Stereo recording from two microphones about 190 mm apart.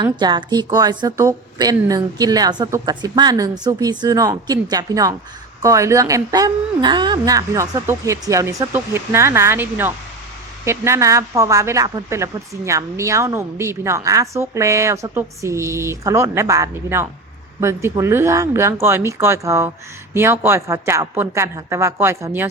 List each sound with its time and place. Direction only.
0.0 s a woman's voice: 25° right (ahead or behind)